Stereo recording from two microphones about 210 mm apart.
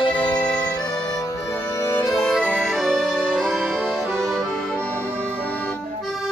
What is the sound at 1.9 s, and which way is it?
Music, 10° left (ahead or behind).